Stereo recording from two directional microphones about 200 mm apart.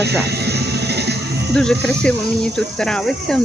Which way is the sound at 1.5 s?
5° left (ahead or behind).